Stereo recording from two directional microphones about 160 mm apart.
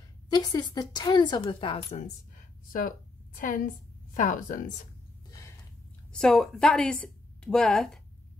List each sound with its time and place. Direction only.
0.3 s a woman's voice: 25° left (ahead or behind)
2.3 s a sound: 60° left (ahead or behind)
3.3 s speech: 55° left (ahead or behind)
6.1 s a woman's voice: 5° left (ahead or behind)